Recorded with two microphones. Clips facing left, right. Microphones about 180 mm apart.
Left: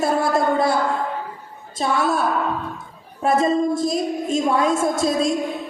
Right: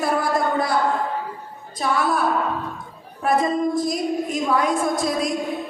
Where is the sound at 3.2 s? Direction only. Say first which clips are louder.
Left 2 dB; 25° left (ahead or behind).